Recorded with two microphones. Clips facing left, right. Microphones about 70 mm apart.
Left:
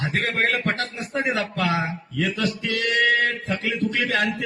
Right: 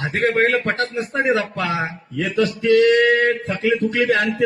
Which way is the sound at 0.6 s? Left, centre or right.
Right.